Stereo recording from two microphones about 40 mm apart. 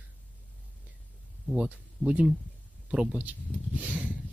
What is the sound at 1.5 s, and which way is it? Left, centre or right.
Speech, right.